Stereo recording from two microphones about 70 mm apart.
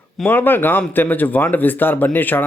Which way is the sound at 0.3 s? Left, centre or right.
Left.